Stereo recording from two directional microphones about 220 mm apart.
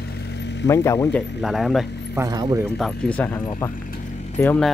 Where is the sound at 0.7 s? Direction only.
15° left (ahead or behind).